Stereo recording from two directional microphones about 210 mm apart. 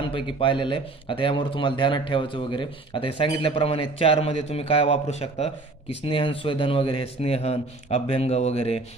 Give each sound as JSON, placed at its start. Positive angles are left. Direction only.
{"t": 0.1, "sound": "a man's voice", "side_deg": 25}